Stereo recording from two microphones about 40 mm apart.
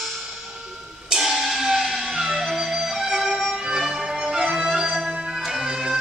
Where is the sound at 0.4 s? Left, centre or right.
Centre.